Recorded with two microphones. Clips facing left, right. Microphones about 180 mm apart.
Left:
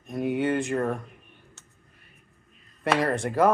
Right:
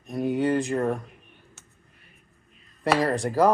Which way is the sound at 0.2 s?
25° left (ahead or behind).